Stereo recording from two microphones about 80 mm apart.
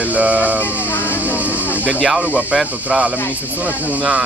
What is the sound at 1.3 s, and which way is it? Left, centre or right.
Speech, centre.